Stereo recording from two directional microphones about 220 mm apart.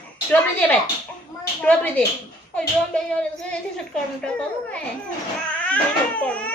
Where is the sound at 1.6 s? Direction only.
5° left (ahead or behind).